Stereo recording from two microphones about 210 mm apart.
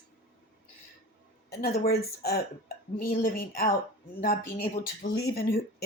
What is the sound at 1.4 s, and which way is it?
Speech, 50° left (ahead or behind).